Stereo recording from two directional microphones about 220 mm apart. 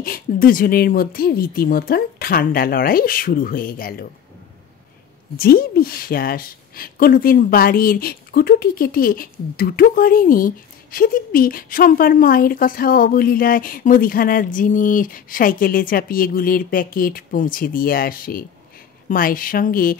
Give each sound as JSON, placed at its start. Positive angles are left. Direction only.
{"t": 0.0, "sound": "a woman's voice", "side_deg": 40}
{"t": 5.4, "sound": "a woman's voice", "side_deg": 45}